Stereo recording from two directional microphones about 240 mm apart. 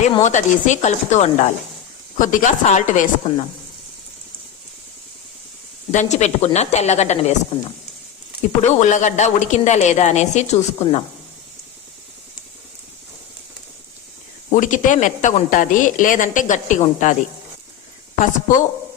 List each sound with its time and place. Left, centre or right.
0.0 s a woman's voice: left
5.9 s a woman's voice: left
8.6 s a woman's voice: left
14.5 s a woman's voice: left
18.3 s a woman's voice: left